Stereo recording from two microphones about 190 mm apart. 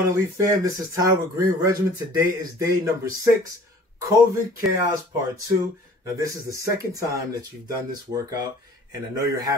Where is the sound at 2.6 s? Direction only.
15° right (ahead or behind).